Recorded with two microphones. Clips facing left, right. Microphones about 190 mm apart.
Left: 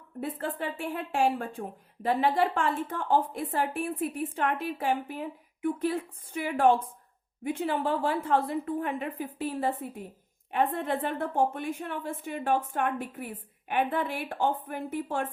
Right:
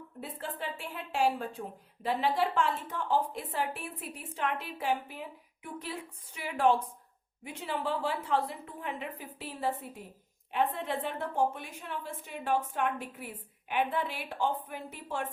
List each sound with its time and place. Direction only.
0.2 s speech: 55° left (ahead or behind)